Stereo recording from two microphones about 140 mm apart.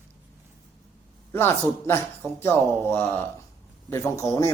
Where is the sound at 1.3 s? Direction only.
15° left (ahead or behind).